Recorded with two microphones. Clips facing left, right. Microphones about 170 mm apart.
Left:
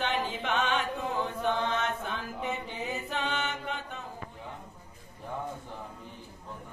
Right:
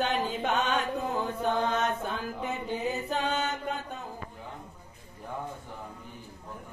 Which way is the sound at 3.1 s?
40° right (ahead or behind).